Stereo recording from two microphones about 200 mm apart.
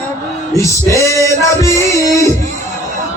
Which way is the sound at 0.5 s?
15° left (ahead or behind).